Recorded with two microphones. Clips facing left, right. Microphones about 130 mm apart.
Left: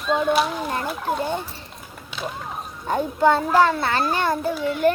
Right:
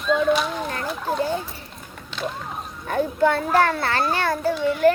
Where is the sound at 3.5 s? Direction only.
20° left (ahead or behind).